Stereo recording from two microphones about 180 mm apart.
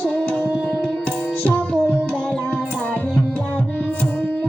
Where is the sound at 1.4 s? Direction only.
10° left (ahead or behind).